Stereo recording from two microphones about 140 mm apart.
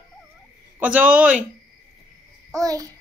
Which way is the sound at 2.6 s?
25° right (ahead or behind).